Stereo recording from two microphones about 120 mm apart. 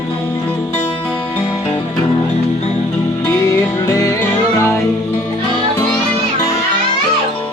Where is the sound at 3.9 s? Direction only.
25° left (ahead or behind).